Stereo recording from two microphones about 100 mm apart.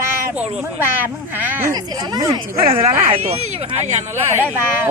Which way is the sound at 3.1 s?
90° right.